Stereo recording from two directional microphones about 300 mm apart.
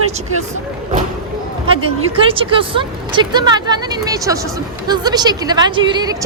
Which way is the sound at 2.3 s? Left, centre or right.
Centre.